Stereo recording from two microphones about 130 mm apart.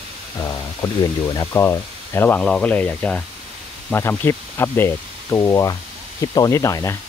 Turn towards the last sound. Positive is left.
turn(degrees=25)  # may be behind; listen again after turning